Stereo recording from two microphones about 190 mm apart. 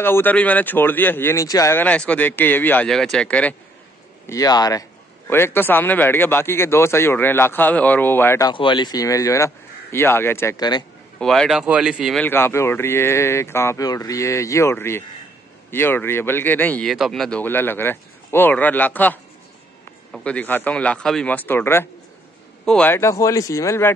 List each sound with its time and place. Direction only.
0.0 s a man's voice: 10° left (ahead or behind)
4.3 s a man's voice: 20° left (ahead or behind)
8.5 s a man's voice: 25° left (ahead or behind)
11.1 s a man's voice: 5° left (ahead or behind)